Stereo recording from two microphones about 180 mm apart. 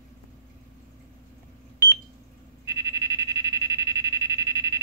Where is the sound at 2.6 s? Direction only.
20° right (ahead or behind).